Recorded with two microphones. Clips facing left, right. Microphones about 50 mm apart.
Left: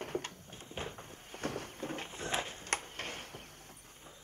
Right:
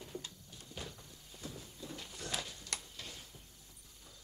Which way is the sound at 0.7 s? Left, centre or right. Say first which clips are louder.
Left 6 dB; left.